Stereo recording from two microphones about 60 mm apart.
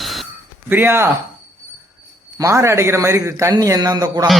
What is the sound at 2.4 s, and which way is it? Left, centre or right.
A man's voice, right.